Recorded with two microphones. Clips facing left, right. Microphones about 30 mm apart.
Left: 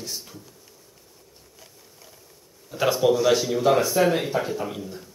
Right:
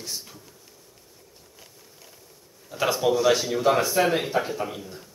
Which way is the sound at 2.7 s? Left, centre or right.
Centre.